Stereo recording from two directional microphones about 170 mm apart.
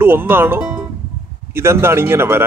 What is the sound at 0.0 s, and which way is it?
Speech, 15° right (ahead or behind).